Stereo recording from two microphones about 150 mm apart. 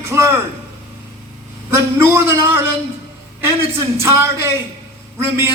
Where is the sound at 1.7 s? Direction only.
15° right (ahead or behind).